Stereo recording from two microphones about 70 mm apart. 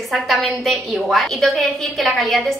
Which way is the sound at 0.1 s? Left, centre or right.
Centre.